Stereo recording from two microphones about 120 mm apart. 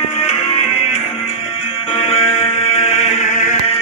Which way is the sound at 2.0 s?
55° left (ahead or behind).